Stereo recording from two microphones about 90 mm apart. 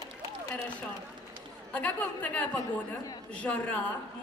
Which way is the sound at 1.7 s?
15° left (ahead or behind).